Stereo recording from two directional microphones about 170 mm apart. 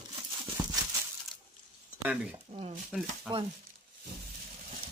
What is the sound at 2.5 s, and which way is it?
Speech, 40° right (ahead or behind).